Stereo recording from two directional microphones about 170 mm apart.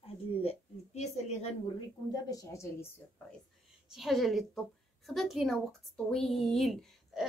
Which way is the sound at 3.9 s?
Centre (ahead or behind).